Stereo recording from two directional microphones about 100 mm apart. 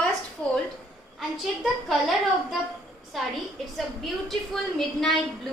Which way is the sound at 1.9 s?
Centre (ahead or behind).